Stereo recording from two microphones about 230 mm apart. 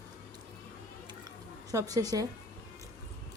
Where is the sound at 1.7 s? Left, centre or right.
Centre.